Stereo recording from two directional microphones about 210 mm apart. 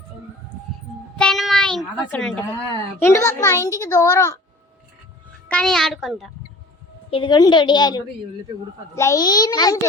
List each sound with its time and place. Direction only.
1.2 s child singing: centre (ahead or behind)
3.0 s a child's voice: 15° left (ahead or behind)
5.5 s a child's voice: 5° left (ahead or behind)
7.1 s a woman's voice: 20° left (ahead or behind)